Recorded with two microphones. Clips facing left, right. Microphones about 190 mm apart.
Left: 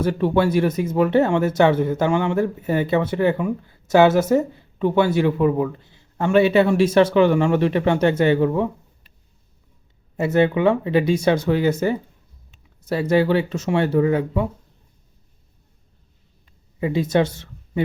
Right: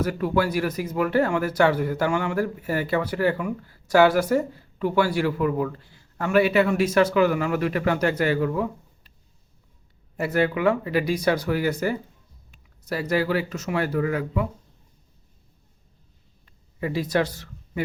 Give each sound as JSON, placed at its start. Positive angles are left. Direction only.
{"t": 0.0, "sound": "speech", "side_deg": 25}
{"t": 10.2, "sound": "speech", "side_deg": 25}
{"t": 16.8, "sound": "speech", "side_deg": 25}